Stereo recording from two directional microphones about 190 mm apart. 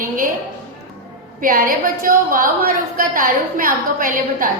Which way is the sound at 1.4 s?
50° right (ahead or behind).